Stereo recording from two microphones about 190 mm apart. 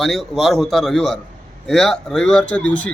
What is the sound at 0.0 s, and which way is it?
A man's voice, centre (ahead or behind).